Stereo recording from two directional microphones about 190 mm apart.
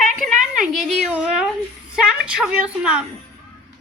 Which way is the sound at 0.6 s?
Centre (ahead or behind).